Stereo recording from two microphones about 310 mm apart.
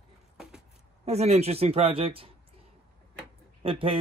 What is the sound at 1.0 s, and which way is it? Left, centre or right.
A man's voice, right.